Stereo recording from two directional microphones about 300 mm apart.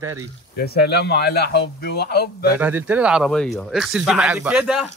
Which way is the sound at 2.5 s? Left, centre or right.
Centre.